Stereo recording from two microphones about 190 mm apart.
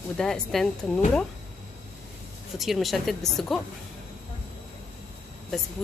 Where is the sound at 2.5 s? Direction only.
Centre (ahead or behind).